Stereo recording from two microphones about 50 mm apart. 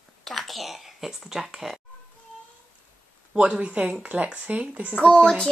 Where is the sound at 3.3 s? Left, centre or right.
Right.